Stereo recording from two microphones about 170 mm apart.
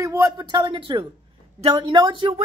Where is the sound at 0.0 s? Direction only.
15° right (ahead or behind).